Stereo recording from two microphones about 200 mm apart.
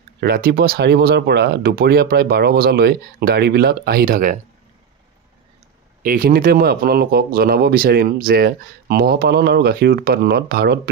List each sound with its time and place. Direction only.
0.2 s speech: 50° right (ahead or behind)
6.0 s speech: 45° right (ahead or behind)